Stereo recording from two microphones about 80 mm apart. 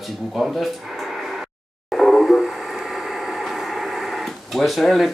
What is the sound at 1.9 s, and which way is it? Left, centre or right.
Radio, centre.